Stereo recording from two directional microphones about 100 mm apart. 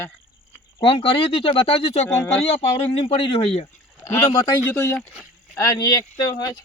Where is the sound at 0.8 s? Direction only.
65° left (ahead or behind).